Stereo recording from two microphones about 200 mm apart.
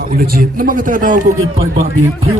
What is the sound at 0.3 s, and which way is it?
Speech, 45° right (ahead or behind).